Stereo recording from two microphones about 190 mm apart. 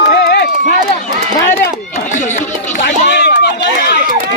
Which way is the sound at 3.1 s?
60° left (ahead or behind).